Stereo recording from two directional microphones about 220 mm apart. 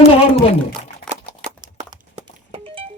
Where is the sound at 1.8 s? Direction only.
30° right (ahead or behind).